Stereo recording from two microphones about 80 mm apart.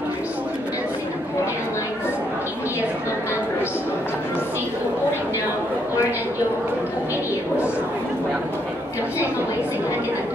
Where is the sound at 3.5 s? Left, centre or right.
Left.